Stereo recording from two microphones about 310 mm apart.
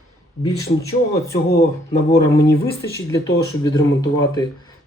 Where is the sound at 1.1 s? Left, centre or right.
Left.